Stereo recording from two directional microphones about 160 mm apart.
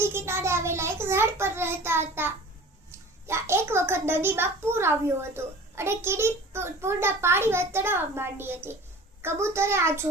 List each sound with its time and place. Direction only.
0.0 s child singing: 15° right (ahead or behind)
2.9 s a child's voice: 15° right (ahead or behind)